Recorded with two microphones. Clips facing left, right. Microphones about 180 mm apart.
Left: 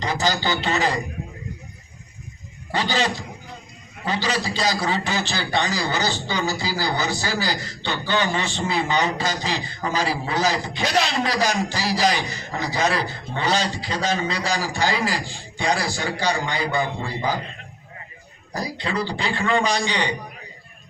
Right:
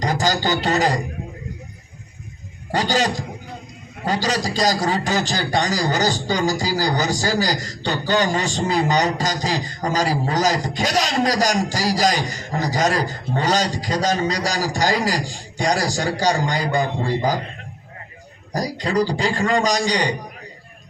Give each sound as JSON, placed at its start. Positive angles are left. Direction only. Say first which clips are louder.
{"t": 0.0, "sound": "a man's voice", "louder": "right 3 dB", "side_deg": -45}
{"t": 2.7, "sound": "a man's voice", "louder": "right 3 dB", "side_deg": -45}
{"t": 18.5, "sound": "a man's voice", "louder": "right 5 dB", "side_deg": -40}